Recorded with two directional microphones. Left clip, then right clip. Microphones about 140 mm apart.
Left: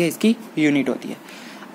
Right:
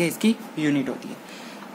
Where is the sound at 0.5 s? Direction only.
45° left (ahead or behind).